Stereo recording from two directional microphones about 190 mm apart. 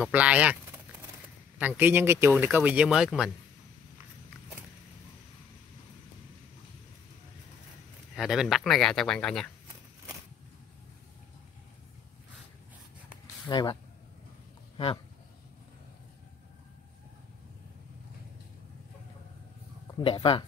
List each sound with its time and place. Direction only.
0.0 s a man's voice: 5° right (ahead or behind)
1.6 s a man's voice: 10° right (ahead or behind)
8.2 s speech: centre (ahead or behind)
13.5 s speech: 25° left (ahead or behind)
20.0 s speech: 30° left (ahead or behind)